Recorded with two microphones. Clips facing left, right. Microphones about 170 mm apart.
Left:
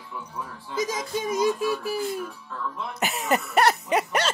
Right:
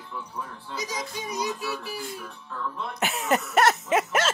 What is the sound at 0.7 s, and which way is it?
Music, 50° left (ahead or behind).